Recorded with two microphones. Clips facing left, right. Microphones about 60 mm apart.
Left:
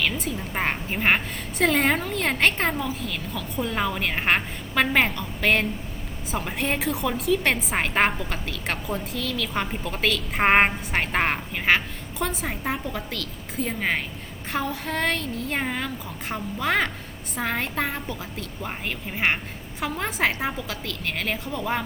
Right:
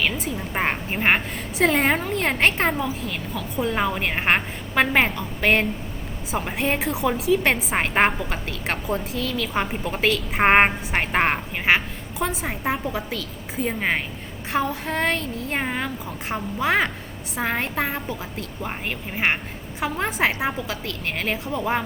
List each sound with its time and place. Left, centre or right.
0.0 s a woman's voice: centre
15.6 s a woman's voice: centre